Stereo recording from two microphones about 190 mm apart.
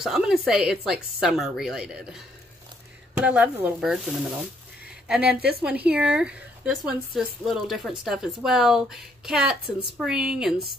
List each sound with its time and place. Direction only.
0.0 s speech: centre (ahead or behind)